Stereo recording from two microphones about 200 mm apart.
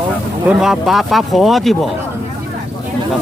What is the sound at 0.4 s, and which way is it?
Speech, centre (ahead or behind).